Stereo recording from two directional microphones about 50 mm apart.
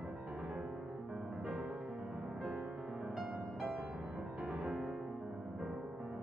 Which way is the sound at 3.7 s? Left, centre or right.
Right.